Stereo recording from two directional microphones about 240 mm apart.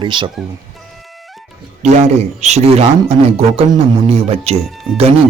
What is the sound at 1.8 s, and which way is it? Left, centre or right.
Speech, right.